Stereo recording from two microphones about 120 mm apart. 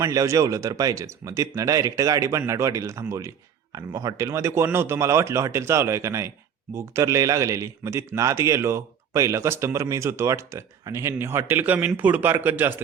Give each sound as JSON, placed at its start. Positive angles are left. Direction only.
{"t": 0.0, "sound": "speech", "side_deg": -30}